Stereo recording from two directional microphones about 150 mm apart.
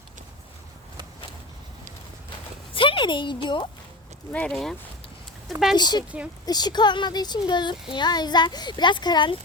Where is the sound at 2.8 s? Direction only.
35° left (ahead or behind).